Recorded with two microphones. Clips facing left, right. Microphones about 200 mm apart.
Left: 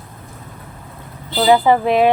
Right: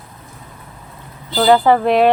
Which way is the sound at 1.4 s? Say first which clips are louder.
Right 1 dB; 10° left (ahead or behind).